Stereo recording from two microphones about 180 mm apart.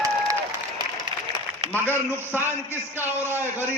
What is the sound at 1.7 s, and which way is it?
Speech, 10° left (ahead or behind).